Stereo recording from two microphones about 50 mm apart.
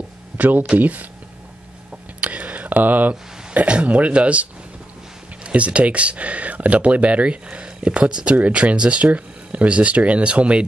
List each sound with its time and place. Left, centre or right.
0.4 s speech: right
2.1 s speech: right